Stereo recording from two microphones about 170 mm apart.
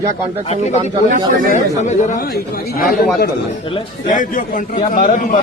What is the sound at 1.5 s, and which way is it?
Speech, 45° left (ahead or behind).